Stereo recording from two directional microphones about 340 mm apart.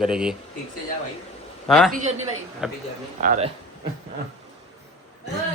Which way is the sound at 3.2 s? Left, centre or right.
Right.